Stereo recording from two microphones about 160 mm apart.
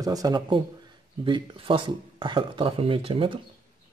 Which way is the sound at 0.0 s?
25° right (ahead or behind).